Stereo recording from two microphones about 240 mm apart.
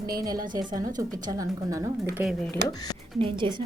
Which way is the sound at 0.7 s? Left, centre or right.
Centre.